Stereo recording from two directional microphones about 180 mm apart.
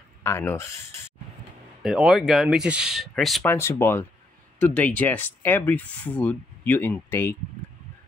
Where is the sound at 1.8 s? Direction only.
5° right (ahead or behind).